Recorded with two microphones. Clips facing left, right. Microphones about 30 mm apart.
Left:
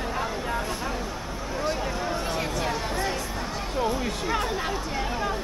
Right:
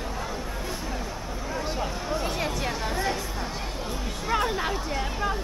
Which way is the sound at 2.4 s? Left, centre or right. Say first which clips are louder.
Left 1 dB; centre.